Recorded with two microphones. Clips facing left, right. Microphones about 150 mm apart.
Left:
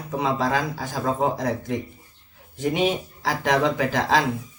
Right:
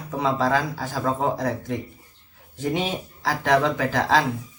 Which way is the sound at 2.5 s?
15° left (ahead or behind).